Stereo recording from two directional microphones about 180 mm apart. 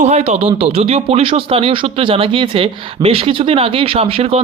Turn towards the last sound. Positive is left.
turn(degrees=-35)  # may be behind; listen again after turning